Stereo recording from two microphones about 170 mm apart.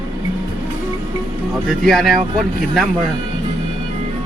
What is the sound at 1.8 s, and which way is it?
Speech, centre (ahead or behind).